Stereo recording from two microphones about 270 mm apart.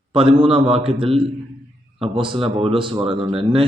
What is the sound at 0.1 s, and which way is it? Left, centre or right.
A man's voice, centre.